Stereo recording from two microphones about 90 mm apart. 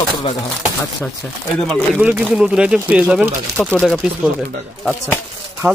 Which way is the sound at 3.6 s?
Centre (ahead or behind).